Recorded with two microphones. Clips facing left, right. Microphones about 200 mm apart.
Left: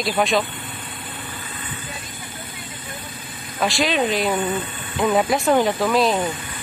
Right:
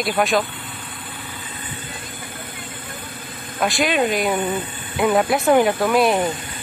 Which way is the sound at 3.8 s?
Centre (ahead or behind).